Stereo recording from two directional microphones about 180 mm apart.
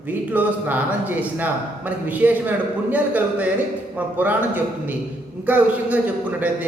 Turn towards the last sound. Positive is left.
turn(degrees=-10)  # may be behind; listen again after turning